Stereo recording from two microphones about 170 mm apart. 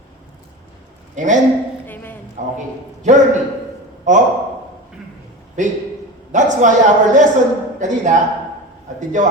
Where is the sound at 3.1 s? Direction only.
45° right (ahead or behind).